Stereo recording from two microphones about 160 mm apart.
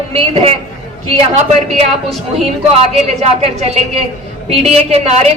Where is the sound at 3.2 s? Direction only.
45° right (ahead or behind).